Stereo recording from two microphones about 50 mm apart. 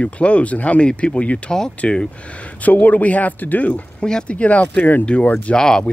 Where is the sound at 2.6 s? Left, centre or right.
Left.